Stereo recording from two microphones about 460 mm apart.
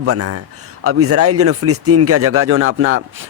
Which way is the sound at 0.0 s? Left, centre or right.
Right.